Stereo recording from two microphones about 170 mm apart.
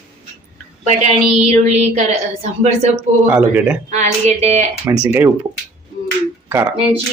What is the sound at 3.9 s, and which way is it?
Speech, 45° right (ahead or behind).